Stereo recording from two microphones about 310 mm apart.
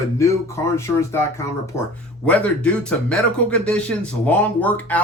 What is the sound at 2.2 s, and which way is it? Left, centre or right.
Speech, centre.